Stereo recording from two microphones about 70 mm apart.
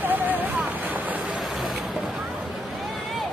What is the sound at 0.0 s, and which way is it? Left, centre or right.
Boat, right.